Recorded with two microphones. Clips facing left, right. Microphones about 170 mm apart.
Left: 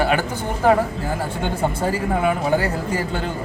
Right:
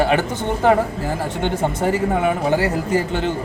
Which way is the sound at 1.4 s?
25° right (ahead or behind).